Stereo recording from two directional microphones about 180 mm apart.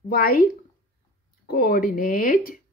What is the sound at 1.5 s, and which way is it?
Speech, 50° left (ahead or behind).